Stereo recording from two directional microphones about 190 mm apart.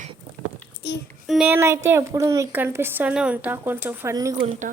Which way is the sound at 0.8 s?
60° left (ahead or behind).